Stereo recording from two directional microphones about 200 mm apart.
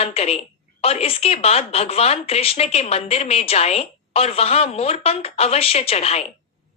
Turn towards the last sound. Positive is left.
turn(degrees=30)  # may be behind; listen again after turning